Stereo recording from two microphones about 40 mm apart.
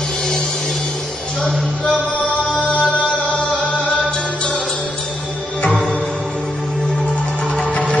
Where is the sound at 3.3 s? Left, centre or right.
Left.